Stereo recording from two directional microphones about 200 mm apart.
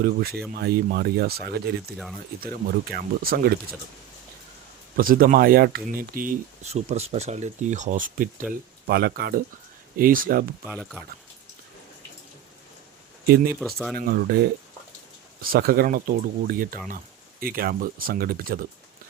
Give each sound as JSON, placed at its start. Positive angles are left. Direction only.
{"t": 0.0, "sound": "speech", "side_deg": -50}
{"t": 4.9, "sound": "speech", "side_deg": -45}
{"t": 8.9, "sound": "speech", "side_deg": -50}
{"t": 13.2, "sound": "speech", "side_deg": -50}
{"t": 13.6, "sound": "speech", "side_deg": 0}
{"t": 14.0, "sound": "speech", "side_deg": -50}
{"t": 15.4, "sound": "speech", "side_deg": -50}